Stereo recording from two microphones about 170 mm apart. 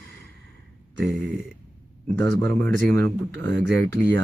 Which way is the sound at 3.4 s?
90° right.